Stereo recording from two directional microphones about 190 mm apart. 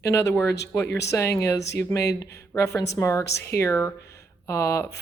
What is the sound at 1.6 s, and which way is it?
Speech, 65° left (ahead or behind).